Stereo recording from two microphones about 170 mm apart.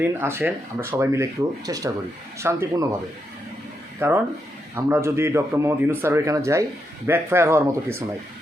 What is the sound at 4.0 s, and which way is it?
A man's voice, 10° right (ahead or behind).